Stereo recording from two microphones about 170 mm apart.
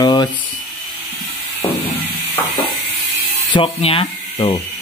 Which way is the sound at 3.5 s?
30° left (ahead or behind).